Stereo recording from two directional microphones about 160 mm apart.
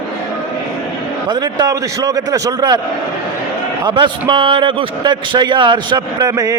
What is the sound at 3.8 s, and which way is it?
A man's voice, 30° right (ahead or behind).